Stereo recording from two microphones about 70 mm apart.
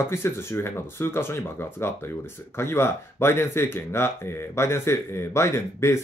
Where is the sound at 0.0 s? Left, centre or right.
Left.